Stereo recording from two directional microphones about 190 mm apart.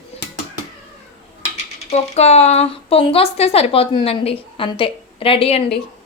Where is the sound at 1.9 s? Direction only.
35° left (ahead or behind).